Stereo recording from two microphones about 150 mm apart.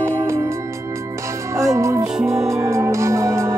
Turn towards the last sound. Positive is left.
turn(degrees=-20)  # may be behind; listen again after turning